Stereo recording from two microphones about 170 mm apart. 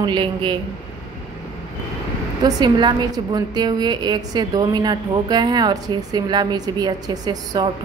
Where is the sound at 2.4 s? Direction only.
25° right (ahead or behind).